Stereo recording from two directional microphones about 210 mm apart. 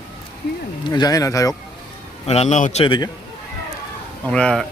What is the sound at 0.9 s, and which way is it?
Speech, 20° left (ahead or behind).